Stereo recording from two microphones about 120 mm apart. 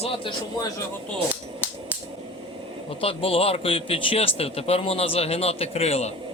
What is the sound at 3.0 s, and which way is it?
Speech, 50° left (ahead or behind).